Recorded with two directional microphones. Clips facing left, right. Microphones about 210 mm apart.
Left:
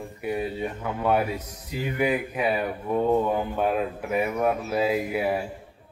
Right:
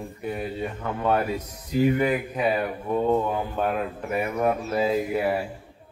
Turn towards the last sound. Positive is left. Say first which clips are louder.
# right 1 dB
turn(degrees=5)  # may be behind; listen again after turning